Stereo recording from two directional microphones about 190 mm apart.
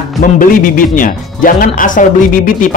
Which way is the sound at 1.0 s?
45° left (ahead or behind).